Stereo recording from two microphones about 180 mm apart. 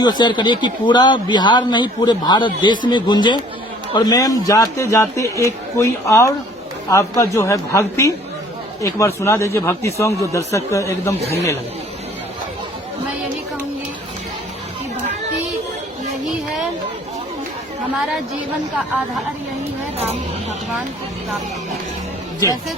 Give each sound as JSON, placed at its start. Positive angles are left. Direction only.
{"t": 0.0, "sound": "a man's voice", "side_deg": 25}
{"t": 17.9, "sound": "a woman's voice", "side_deg": -5}